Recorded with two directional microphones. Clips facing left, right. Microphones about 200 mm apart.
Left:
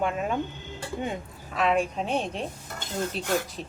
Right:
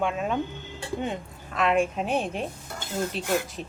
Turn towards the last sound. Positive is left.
turn(degrees=-5)  # may be behind; listen again after turning